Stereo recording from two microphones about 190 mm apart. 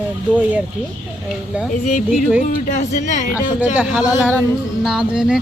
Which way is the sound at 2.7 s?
40° left (ahead or behind).